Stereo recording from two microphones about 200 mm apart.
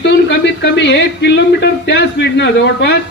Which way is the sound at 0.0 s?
60° left (ahead or behind).